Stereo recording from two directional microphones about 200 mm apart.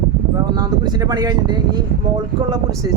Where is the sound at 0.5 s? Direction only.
20° right (ahead or behind).